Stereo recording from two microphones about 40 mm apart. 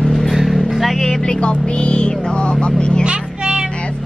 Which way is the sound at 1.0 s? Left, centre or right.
Centre.